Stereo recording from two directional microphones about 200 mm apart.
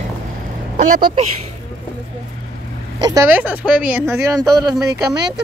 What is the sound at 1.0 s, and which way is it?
Speech, 30° right (ahead or behind).